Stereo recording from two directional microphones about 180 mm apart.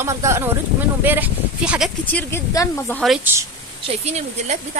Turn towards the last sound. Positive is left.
turn(degrees=-40)  # may be behind; listen again after turning